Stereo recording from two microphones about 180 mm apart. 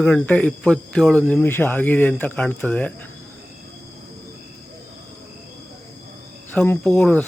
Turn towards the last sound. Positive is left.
turn(degrees=5)  # may be behind; listen again after turning